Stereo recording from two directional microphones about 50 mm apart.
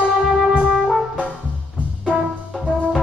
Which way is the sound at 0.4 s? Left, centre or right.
Centre.